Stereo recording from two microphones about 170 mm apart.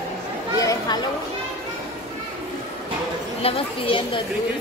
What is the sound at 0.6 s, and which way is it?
Chatter, 20° left (ahead or behind).